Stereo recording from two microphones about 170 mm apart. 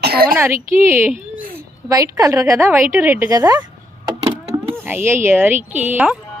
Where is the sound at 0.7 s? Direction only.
15° right (ahead or behind).